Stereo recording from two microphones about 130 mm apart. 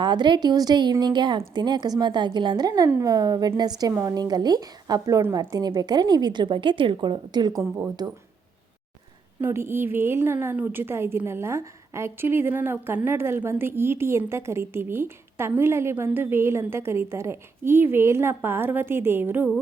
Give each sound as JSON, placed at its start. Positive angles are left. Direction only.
{"t": 0.0, "sound": "a woman's voice", "side_deg": -35}
{"t": 9.4, "sound": "a woman's voice", "side_deg": -20}